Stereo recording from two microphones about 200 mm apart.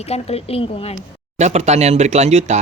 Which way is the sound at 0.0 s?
30° left (ahead or behind).